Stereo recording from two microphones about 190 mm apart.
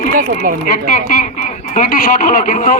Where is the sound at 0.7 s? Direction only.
45° left (ahead or behind).